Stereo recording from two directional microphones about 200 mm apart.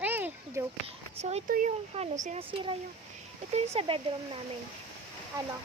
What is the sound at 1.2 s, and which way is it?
Speech, 40° right (ahead or behind).